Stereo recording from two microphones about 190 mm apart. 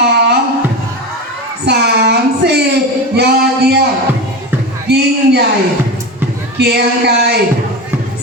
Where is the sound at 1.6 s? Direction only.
60° right (ahead or behind).